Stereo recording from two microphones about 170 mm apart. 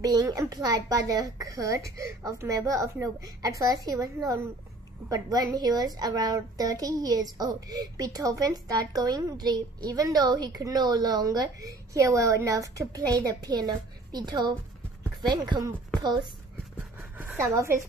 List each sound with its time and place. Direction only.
0.0 s a woman's voice: 20° right (ahead or behind)
17.2 s a woman's voice: 15° right (ahead or behind)